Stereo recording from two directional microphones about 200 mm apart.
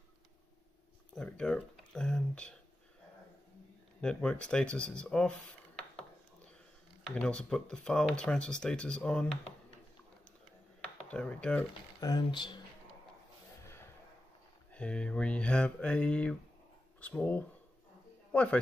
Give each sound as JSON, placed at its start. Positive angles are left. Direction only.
{"t": 1.1, "sound": "speech", "side_deg": 5}
{"t": 4.0, "sound": "speech", "side_deg": 5}
{"t": 7.2, "sound": "speech", "side_deg": 5}
{"t": 11.1, "sound": "speech", "side_deg": 5}
{"t": 12.0, "sound": "speech", "side_deg": 20}
{"t": 14.7, "sound": "a man's voice", "side_deg": 5}